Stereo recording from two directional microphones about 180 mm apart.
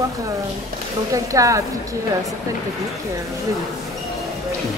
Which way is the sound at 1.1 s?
20° right (ahead or behind).